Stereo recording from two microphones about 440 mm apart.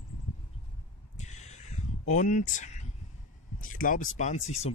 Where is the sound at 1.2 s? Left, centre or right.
Centre.